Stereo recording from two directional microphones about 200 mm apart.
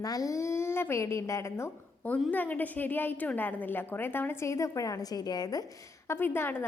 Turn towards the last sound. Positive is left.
turn(degrees=10)  # may be behind; listen again after turning